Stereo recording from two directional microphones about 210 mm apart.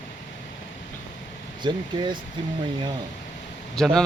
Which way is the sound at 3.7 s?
5° left (ahead or behind).